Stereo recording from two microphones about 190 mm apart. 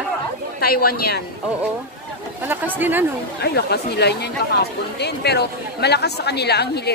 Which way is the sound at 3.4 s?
60° left (ahead or behind).